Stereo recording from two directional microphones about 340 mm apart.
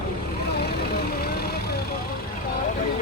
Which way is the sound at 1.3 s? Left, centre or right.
Left.